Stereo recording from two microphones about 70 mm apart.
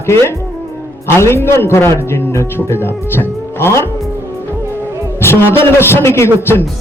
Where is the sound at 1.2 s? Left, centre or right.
Left.